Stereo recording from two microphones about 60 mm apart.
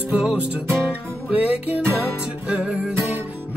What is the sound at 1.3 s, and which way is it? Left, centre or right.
Music, right.